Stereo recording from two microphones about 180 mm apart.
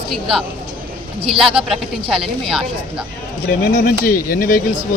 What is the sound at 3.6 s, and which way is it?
Speech, 55° left (ahead or behind).